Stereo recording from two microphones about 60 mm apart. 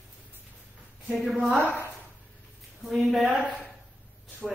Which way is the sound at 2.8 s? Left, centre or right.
Centre.